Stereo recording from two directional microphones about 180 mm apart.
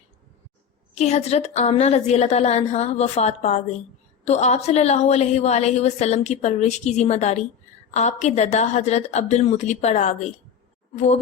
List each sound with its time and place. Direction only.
0.9 s a woman's voice: 35° left (ahead or behind)